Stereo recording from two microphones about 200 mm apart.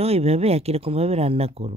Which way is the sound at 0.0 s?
30° right (ahead or behind).